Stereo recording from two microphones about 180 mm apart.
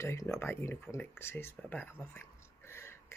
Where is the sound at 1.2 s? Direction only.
15° left (ahead or behind).